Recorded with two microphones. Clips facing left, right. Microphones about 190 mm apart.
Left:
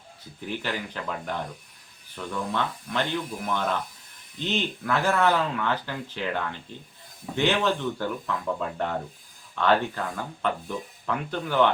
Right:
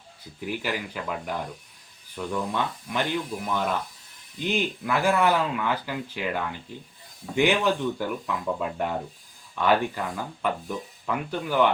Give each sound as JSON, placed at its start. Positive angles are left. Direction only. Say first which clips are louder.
{"t": 0.4, "sound": "speech", "louder": "right 1 dB", "side_deg": -10}